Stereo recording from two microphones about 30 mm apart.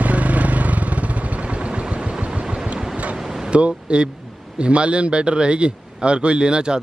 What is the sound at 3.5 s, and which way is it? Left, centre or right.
A man's voice, right.